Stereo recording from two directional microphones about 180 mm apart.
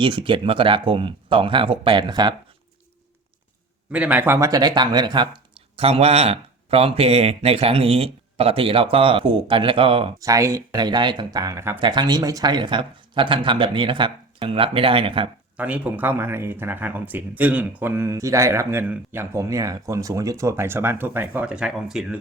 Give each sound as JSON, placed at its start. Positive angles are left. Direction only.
{"t": 0.0, "sound": "speech", "side_deg": -25}
{"t": 3.9, "sound": "speech", "side_deg": -10}
{"t": 10.2, "sound": "speech", "side_deg": -15}
{"t": 11.8, "sound": "speech", "side_deg": -25}
{"t": 15.5, "sound": "speech", "side_deg": -5}